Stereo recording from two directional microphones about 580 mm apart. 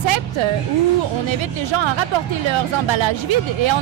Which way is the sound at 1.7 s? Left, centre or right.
Right.